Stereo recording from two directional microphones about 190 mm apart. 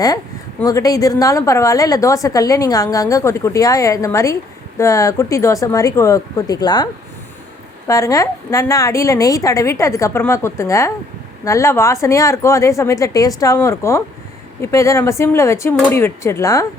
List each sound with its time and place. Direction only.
0.6 s a woman's voice: 20° left (ahead or behind)
7.9 s a woman's voice: 15° left (ahead or behind)